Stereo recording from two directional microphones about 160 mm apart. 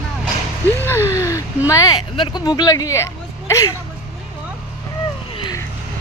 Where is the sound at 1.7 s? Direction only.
20° left (ahead or behind).